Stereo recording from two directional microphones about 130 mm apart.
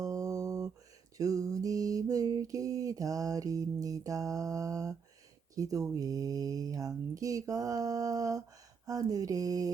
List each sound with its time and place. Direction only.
0.0 s a sound: 25° right (ahead or behind)
1.2 s mantra: 25° right (ahead or behind)
5.5 s speech: 25° right (ahead or behind)